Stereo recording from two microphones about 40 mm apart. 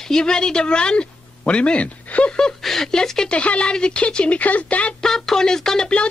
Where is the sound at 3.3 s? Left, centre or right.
Left.